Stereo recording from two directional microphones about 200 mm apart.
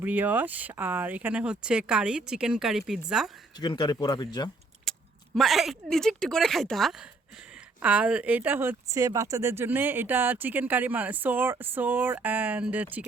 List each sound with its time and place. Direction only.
0.0 s speech: 10° right (ahead or behind)
3.6 s speech: 20° left (ahead or behind)
4.9 s speech: centre (ahead or behind)